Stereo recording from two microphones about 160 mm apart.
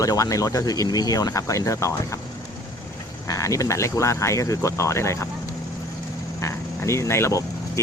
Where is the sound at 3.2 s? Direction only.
20° left (ahead or behind).